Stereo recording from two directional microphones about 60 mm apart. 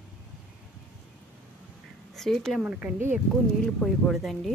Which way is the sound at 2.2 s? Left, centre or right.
Centre.